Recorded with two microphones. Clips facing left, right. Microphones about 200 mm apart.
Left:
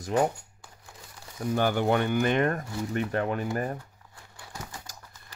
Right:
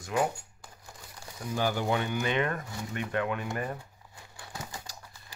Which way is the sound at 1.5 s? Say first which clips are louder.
Left 4 dB; 55° left (ahead or behind).